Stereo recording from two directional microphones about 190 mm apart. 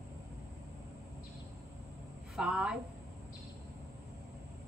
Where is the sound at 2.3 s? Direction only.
5° right (ahead or behind).